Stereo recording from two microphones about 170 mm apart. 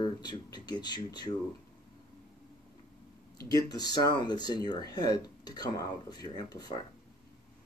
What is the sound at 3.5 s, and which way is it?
Speech, 25° left (ahead or behind).